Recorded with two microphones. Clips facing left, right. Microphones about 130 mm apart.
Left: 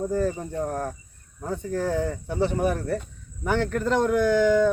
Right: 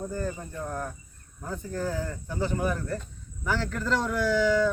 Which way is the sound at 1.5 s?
70° left (ahead or behind).